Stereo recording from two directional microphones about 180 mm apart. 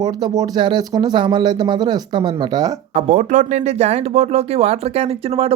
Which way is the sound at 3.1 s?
40° right (ahead or behind).